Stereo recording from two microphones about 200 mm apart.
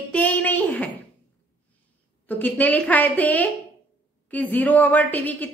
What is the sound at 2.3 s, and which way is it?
A woman's voice, 10° left (ahead or behind).